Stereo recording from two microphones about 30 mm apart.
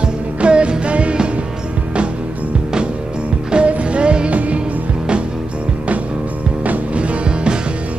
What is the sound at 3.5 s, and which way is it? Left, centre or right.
Music, right.